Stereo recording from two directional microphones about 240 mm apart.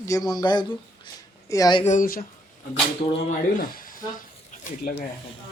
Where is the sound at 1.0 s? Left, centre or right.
Centre.